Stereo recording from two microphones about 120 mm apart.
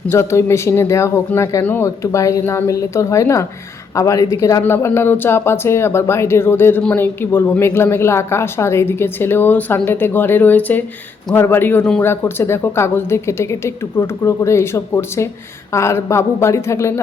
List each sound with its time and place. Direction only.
0.1 s a woman's voice: 25° left (ahead or behind)